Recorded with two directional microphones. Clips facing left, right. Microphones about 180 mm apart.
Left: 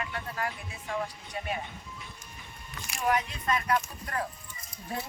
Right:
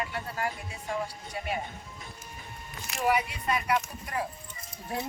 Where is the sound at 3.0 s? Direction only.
10° right (ahead or behind).